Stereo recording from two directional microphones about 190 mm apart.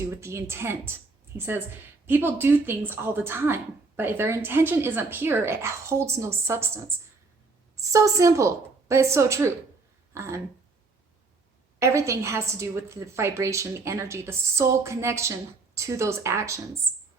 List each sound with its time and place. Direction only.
0.0 s speech: 15° right (ahead or behind)
11.8 s speech: 15° right (ahead or behind)